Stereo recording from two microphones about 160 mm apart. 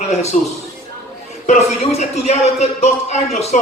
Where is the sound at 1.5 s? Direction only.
45° left (ahead or behind).